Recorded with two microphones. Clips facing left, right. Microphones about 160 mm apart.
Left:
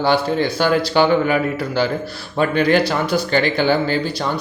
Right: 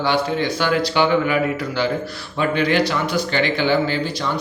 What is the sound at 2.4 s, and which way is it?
Speech, 45° left (ahead or behind).